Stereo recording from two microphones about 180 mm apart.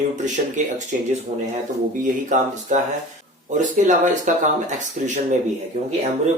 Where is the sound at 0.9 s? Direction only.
50° right (ahead or behind).